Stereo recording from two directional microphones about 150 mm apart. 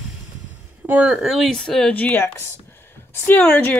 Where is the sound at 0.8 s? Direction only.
10° right (ahead or behind).